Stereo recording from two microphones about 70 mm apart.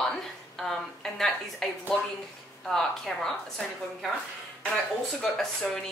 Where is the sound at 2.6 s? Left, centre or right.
Centre.